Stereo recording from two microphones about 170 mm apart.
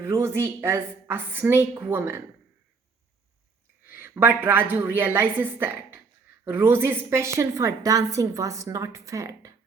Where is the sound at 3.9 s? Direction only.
15° right (ahead or behind).